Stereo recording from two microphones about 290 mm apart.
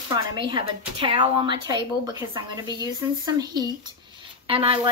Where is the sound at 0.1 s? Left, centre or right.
Centre.